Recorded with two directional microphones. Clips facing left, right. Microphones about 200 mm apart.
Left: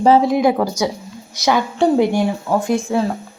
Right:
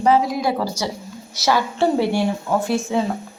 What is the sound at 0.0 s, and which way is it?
Speech, 25° left (ahead or behind).